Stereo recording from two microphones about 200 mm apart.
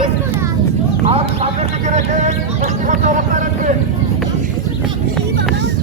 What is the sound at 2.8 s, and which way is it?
Speech, 40° right (ahead or behind).